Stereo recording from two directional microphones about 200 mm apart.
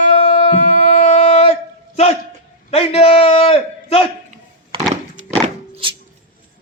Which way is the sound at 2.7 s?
30° left (ahead or behind).